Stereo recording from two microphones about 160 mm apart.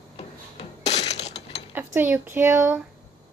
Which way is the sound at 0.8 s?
45° left (ahead or behind).